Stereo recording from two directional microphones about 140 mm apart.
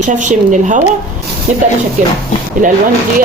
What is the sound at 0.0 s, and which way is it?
Speech, 60° right (ahead or behind).